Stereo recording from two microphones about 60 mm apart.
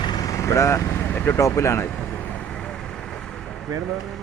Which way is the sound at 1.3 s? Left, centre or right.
Left.